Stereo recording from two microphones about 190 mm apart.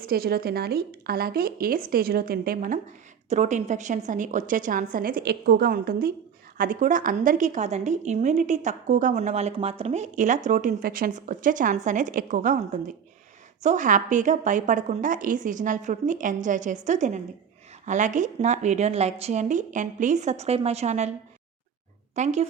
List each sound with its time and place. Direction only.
0.0 s a woman's voice: 55° right (ahead or behind); by 21.1 s 35° right (ahead or behind)
22.1 s speech: 35° right (ahead or behind)